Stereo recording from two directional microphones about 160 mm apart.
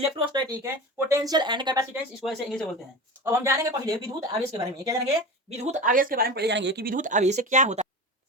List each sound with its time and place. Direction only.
0.0 s speech: 25° right (ahead or behind)
2.2 s speech: centre (ahead or behind)
3.2 s speech: 15° right (ahead or behind)
5.5 s speech: 45° right (ahead or behind); by 6.9 s 90° right
6.9 s speech: 50° right (ahead or behind)